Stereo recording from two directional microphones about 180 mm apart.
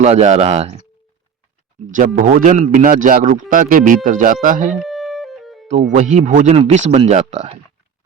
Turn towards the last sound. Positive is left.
turn(degrees=-40)  # may be behind; listen again after turning